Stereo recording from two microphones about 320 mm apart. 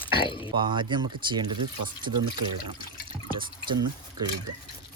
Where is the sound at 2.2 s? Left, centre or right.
Right.